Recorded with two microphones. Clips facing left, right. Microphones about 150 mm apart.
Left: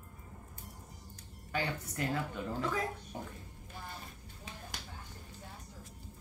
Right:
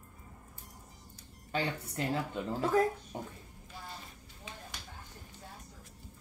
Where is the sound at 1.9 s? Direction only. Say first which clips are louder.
Right 2 dB; 25° right (ahead or behind).